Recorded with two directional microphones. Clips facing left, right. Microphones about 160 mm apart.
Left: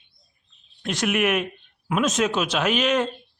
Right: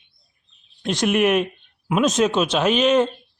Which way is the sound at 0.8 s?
30° right (ahead or behind).